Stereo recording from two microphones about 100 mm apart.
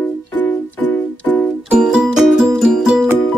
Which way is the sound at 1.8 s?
5° right (ahead or behind).